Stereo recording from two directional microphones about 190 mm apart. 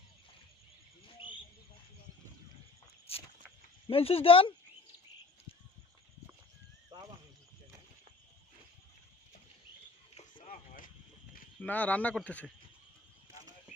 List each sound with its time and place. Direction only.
1.0 s cricket: 25° left (ahead or behind)
3.8 s speech: 30° left (ahead or behind)
10.2 s a sound: 35° left (ahead or behind)
11.6 s speech: 10° left (ahead or behind)